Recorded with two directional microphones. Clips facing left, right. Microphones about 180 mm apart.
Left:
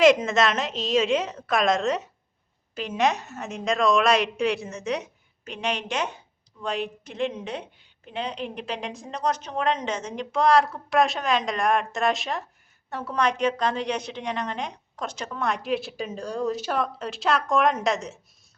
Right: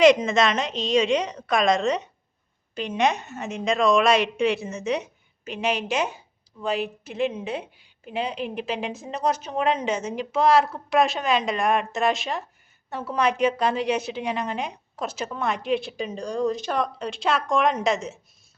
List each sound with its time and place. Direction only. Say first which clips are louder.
0.0 s a woman's voice: right 1 dB; centre (ahead or behind)